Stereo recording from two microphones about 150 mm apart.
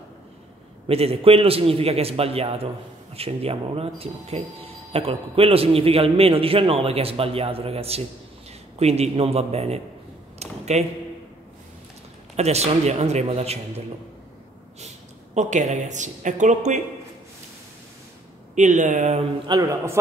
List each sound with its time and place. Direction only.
0.8 s a man's voice: 40° right (ahead or behind)
10.4 s a sound: 45° right (ahead or behind)
12.4 s a woman's voice: 45° right (ahead or behind)
15.3 s a woman's voice: 50° right (ahead or behind)
18.5 s a woman's voice: 55° right (ahead or behind)
19.4 s a man's voice: 25° right (ahead or behind)